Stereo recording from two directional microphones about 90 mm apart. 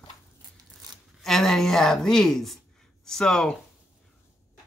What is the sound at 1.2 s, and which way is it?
A woman's voice, 5° left (ahead or behind).